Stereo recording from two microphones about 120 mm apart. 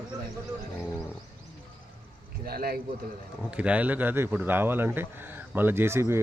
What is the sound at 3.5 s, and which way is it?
Speech, 10° right (ahead or behind).